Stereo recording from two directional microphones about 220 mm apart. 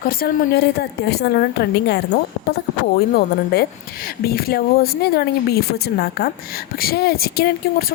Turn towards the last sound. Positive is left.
turn(degrees=45)  # may be behind; listen again after turning